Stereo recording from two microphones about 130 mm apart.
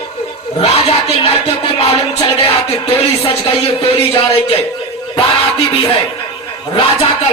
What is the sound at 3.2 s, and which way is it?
Music, 45° left (ahead or behind).